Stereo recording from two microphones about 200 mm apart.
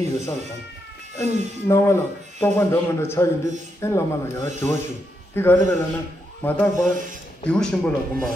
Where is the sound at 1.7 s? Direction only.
15° left (ahead or behind).